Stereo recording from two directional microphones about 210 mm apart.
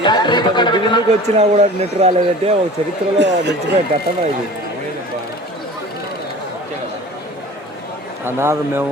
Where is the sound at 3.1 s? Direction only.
55° right (ahead or behind).